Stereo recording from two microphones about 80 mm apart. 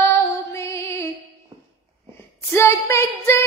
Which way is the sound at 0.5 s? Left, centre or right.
Left.